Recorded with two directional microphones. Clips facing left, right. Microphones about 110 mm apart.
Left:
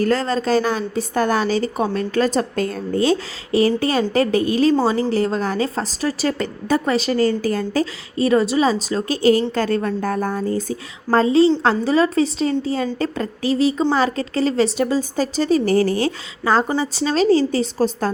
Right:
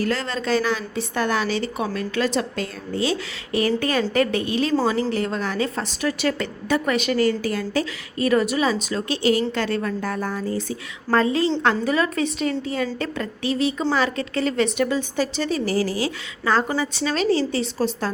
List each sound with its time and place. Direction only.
0.0 s a woman's voice: 40° left (ahead or behind)
16.4 s a woman's voice: 30° left (ahead or behind)